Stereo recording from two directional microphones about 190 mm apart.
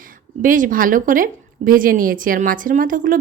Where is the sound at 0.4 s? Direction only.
45° right (ahead or behind).